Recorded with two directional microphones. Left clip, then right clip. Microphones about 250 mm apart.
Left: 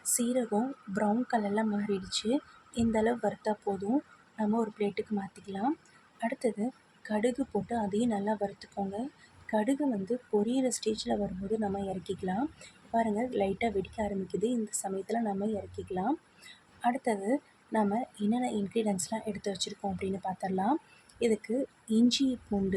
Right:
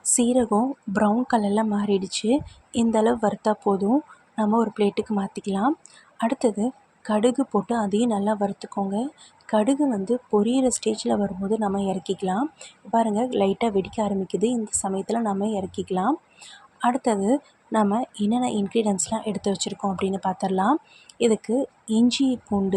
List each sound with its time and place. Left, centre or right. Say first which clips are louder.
0.0 s a woman's voice: right 10 dB; centre